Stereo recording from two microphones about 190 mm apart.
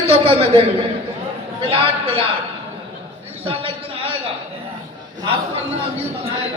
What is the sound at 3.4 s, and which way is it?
Speech, 30° right (ahead or behind).